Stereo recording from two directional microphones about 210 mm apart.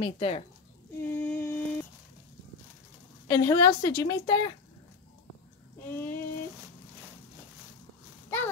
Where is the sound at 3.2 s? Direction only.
15° left (ahead or behind).